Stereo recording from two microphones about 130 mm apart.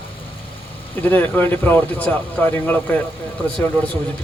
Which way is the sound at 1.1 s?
15° left (ahead or behind).